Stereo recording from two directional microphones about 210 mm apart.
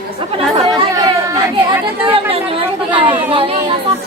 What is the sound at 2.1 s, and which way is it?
Speech, 25° right (ahead or behind).